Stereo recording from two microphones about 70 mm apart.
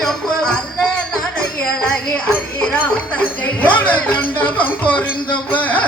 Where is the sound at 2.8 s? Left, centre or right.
Left.